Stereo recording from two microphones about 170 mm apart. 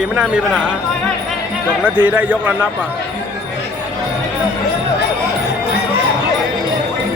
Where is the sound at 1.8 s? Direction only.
10° right (ahead or behind).